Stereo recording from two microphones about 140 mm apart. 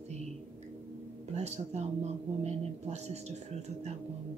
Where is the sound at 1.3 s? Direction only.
50° right (ahead or behind).